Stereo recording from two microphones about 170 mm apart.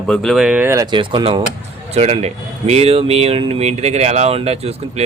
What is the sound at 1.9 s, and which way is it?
Speech, 40° right (ahead or behind).